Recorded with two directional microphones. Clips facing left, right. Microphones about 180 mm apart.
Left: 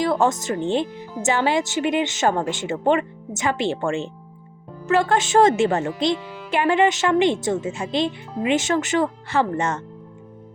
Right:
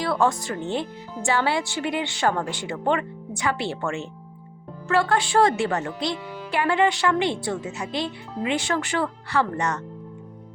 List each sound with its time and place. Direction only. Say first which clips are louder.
0.0 s speech: left 3 dB; 20° left (ahead or behind)